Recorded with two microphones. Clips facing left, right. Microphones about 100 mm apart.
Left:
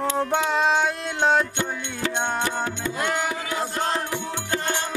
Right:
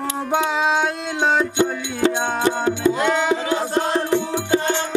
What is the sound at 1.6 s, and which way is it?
Music, 25° right (ahead or behind).